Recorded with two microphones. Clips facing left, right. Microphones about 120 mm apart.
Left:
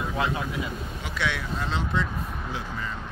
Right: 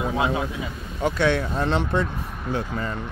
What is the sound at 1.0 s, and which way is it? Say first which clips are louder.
A man's voice: right 10 dB; 45° right (ahead or behind).